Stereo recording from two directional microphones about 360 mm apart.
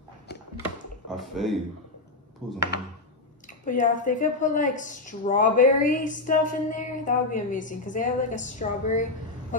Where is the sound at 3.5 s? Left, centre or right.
Left.